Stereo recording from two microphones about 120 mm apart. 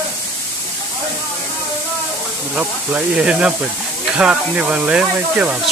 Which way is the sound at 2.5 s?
10° right (ahead or behind).